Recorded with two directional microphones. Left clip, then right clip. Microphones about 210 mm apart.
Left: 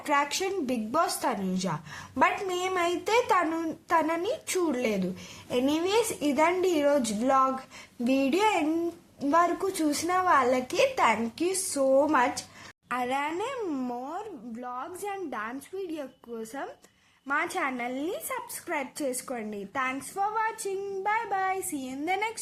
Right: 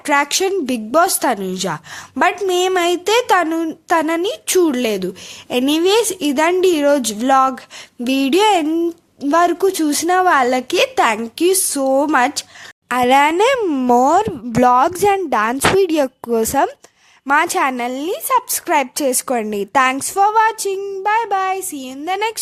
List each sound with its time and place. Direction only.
0.0 s a woman's voice: 35° right (ahead or behind)